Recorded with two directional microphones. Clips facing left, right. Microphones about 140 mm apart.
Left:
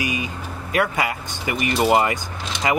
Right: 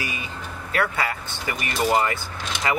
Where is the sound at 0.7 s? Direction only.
15° left (ahead or behind).